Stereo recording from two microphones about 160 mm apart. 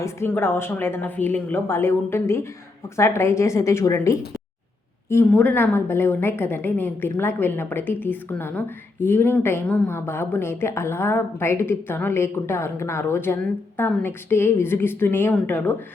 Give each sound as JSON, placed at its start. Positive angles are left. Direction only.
{"t": 0.0, "sound": "a woman's voice", "side_deg": 15}